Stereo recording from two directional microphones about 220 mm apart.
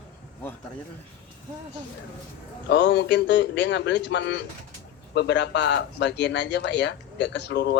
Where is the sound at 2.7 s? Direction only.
55° left (ahead or behind).